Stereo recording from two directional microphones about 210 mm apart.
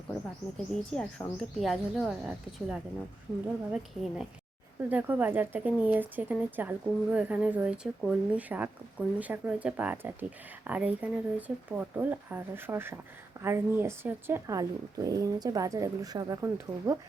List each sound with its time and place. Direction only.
0.7 s speech: 5° left (ahead or behind); by 17.0 s 15° right (ahead or behind)